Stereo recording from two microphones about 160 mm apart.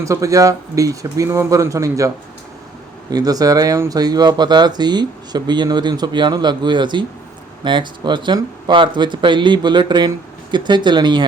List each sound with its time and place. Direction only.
0.0 s speech: 20° right (ahead or behind)